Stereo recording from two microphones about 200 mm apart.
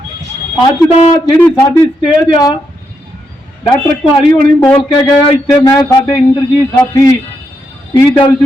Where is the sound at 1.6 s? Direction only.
15° left (ahead or behind).